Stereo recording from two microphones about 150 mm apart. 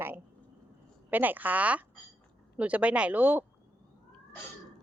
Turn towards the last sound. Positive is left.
turn(degrees=-10)  # may be behind; listen again after turning